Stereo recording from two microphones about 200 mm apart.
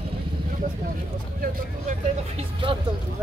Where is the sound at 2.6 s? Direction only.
25° right (ahead or behind).